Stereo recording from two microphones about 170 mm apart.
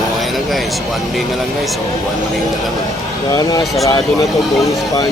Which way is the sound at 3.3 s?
20° left (ahead or behind).